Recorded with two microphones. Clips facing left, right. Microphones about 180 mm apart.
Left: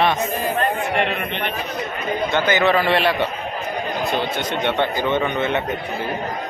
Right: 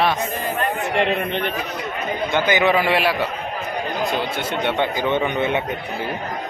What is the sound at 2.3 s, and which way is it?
A man's voice, 15° right (ahead or behind).